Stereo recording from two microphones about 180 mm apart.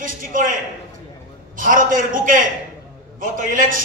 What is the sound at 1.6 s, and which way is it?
A man's voice, 50° right (ahead or behind).